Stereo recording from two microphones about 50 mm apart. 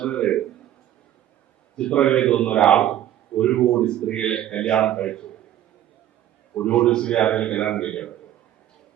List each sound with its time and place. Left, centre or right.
0.0 s a sound: left
1.7 s a man's voice: left
6.7 s a man's voice: centre